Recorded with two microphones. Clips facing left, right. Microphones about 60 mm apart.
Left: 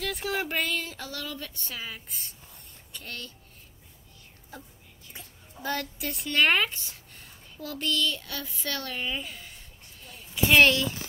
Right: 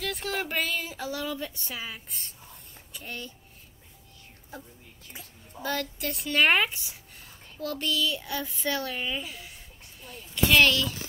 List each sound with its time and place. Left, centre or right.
0.0 s speech: centre
5.1 s a woman's voice: centre
8.2 s child singing: centre
8.6 s a woman's voice: centre
10.5 s speech: left